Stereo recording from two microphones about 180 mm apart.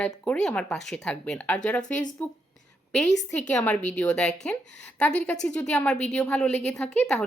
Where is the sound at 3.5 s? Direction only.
5° left (ahead or behind).